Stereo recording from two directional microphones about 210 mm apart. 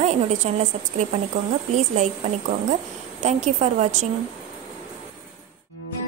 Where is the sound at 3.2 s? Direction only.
35° right (ahead or behind).